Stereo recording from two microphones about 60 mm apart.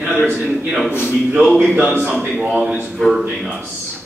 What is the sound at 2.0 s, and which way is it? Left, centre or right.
Speech, centre.